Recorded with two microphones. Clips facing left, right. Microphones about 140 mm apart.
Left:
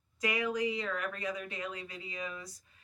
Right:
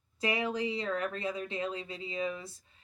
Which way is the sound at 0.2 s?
30° right (ahead or behind).